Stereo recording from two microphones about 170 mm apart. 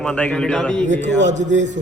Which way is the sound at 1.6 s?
45° right (ahead or behind).